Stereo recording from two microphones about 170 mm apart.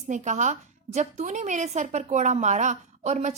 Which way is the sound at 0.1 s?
45° right (ahead or behind).